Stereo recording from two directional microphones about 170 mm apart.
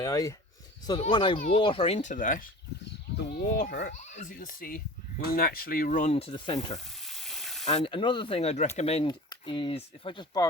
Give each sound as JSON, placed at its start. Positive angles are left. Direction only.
{"t": 0.0, "sound": "speech", "side_deg": 20}
{"t": 1.5, "sound": "ratchet", "side_deg": 30}
{"t": 3.2, "sound": "a child's voice", "side_deg": 70}
{"t": 3.9, "sound": "speech", "side_deg": 45}
{"t": 6.7, "sound": "frying", "side_deg": 0}
{"t": 7.6, "sound": "ratchet", "side_deg": 40}
{"t": 9.0, "sound": "speech", "side_deg": 25}